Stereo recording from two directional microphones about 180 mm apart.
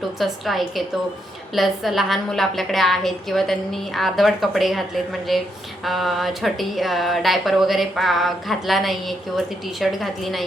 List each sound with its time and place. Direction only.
0.2 s speech: centre (ahead or behind)